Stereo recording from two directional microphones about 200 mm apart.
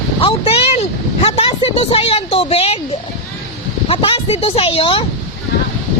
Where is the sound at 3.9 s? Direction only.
25° left (ahead or behind).